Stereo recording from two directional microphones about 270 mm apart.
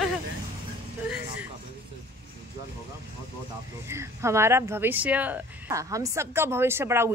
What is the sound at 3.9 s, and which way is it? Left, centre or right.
A woman's voice, centre.